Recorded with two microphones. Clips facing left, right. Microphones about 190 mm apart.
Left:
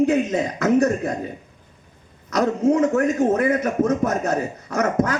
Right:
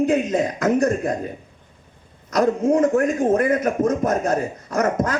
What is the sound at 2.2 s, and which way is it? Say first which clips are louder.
A man's voice: even; 55° right (ahead or behind).